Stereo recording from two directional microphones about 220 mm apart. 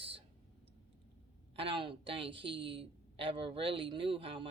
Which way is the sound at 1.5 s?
25° right (ahead or behind).